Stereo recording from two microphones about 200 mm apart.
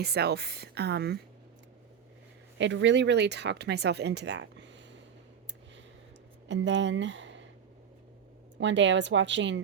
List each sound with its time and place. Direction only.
0.0 s speech: 55° right (ahead or behind)
2.6 s speech: 65° right (ahead or behind)
6.5 s speech: 65° right (ahead or behind)
8.5 s speech: 65° right (ahead or behind)